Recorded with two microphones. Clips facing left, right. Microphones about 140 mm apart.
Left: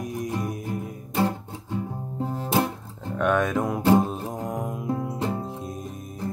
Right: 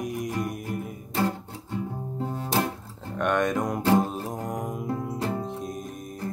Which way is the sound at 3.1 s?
5° left (ahead or behind).